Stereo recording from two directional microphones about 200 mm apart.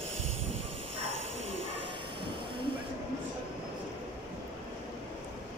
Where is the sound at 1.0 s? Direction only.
75° right (ahead or behind).